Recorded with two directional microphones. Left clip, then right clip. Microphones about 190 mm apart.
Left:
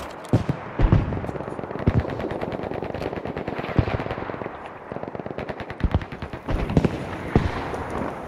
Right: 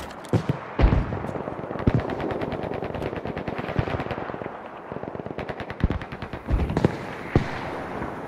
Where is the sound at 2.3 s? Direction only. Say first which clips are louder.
Even; centre (ahead or behind).